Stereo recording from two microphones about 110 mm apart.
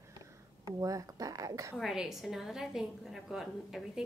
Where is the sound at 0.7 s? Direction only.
30° right (ahead or behind).